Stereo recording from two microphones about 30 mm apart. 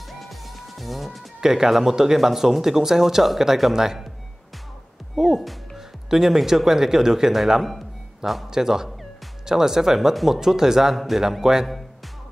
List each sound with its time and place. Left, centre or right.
0.2 s music: centre
1.4 s speech: centre
5.1 s speech: centre
11.0 s speech: centre